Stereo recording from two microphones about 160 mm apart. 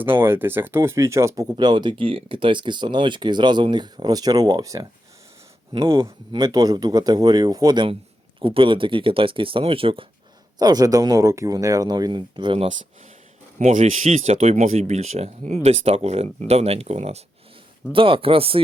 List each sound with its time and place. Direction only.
0.0 s speech: 15° right (ahead or behind); by 10.1 s 35° right (ahead or behind)
10.6 s speech: 25° right (ahead or behind)
13.6 s speech: 50° right (ahead or behind); by 18.6 s 35° right (ahead or behind)